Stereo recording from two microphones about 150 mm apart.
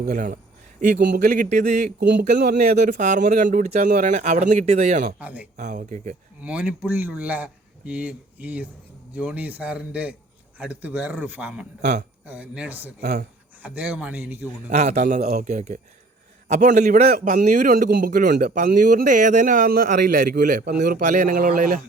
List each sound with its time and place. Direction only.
0.0 s a man's voice: 65° right (ahead or behind)
5.2 s speech: 10° right (ahead or behind)
5.5 s a man's voice: 55° right (ahead or behind)
6.4 s speech: 10° right (ahead or behind)
13.0 s a man's voice: 60° right (ahead or behind)
13.6 s speech: 10° right (ahead or behind)
14.7 s a man's voice: 50° right (ahead or behind)